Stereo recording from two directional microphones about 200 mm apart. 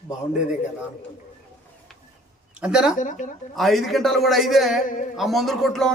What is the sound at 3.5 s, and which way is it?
A man's voice, centre (ahead or behind).